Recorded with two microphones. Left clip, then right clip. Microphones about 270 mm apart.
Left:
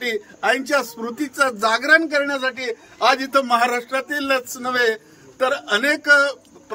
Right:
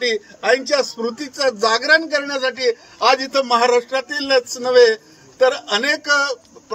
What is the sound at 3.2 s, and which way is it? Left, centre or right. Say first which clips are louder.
A man's voice: right 1 dB; centre.